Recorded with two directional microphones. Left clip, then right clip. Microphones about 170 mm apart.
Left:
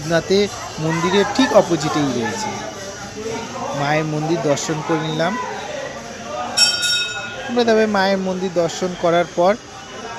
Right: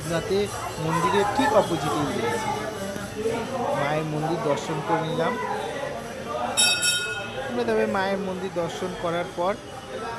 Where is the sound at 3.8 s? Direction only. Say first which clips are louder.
Left 7 dB; 40° left (ahead or behind).